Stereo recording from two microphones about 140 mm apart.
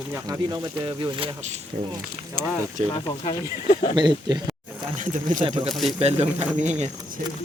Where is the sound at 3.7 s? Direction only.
50° left (ahead or behind).